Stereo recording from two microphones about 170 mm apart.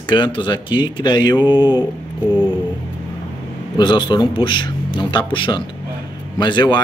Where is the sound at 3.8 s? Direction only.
25° left (ahead or behind).